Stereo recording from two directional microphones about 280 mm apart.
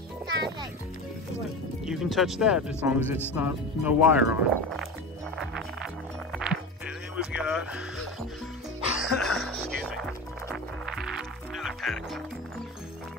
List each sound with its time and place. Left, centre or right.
1.9 s speech: centre
6.3 s music: centre
7.2 s speech: centre
8.9 s music: centre